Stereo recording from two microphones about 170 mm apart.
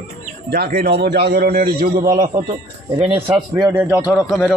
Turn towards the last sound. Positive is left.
turn(degrees=0)  # may be behind; listen again after turning